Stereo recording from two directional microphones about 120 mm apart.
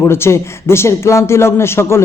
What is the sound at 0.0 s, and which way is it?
A man's voice, 20° left (ahead or behind).